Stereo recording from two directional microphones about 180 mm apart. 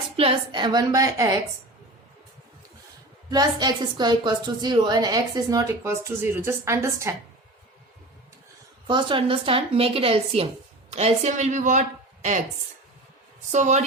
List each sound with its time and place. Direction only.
0.2 s a woman's voice: 30° right (ahead or behind)
3.2 s a woman's voice: 20° right (ahead or behind)
8.9 s a woman's voice: 25° right (ahead or behind)
13.5 s a woman's voice: 40° right (ahead or behind)